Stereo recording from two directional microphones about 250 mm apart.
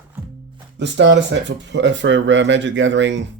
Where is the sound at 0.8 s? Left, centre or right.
Right.